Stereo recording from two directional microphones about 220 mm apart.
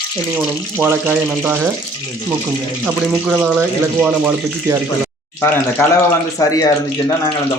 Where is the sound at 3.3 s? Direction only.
5° right (ahead or behind).